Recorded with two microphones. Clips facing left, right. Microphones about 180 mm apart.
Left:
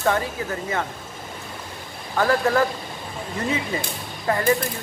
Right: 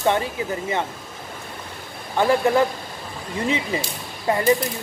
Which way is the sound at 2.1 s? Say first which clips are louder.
Right 2 dB; 20° right (ahead or behind).